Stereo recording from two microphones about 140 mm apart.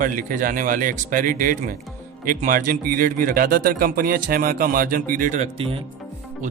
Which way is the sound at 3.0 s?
90° right.